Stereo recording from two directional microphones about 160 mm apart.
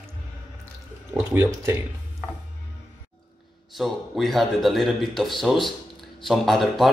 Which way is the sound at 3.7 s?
Centre (ahead or behind).